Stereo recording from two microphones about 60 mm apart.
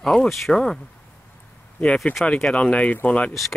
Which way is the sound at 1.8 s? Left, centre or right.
Centre.